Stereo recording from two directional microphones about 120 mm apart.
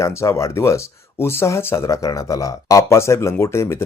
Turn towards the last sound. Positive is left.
turn(degrees=20)  # may be behind; listen again after turning